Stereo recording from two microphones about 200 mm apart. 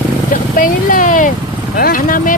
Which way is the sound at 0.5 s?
45° left (ahead or behind).